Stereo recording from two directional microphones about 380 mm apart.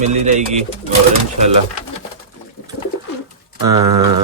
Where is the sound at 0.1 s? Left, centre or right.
Centre.